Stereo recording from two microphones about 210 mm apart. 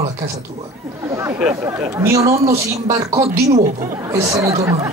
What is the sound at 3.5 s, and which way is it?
Speech, 35° right (ahead or behind).